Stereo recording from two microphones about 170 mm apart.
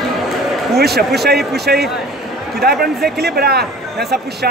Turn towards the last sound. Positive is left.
turn(degrees=-70)  # may be behind; listen again after turning